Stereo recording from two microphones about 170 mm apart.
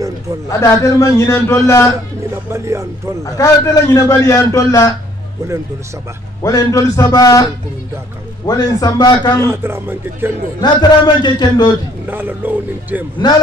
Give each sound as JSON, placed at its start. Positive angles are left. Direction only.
{"t": 0.5, "sound": "a man's voice", "side_deg": 20}
{"t": 2.5, "sound": "speech", "side_deg": -15}
{"t": 3.3, "sound": "a man's voice", "side_deg": 20}
{"t": 6.4, "sound": "a man's voice", "side_deg": 20}
{"t": 8.5, "sound": "a man's voice", "side_deg": 20}
{"t": 9.4, "sound": "speech", "side_deg": -15}
{"t": 10.6, "sound": "a man's voice", "side_deg": 25}
{"t": 12.1, "sound": "speech", "side_deg": -10}
{"t": 13.2, "sound": "a man's voice", "side_deg": 25}